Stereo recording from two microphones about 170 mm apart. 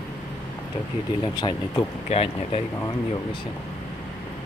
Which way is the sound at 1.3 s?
25° left (ahead or behind).